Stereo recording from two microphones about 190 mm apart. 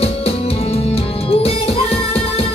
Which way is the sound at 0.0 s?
30° left (ahead or behind).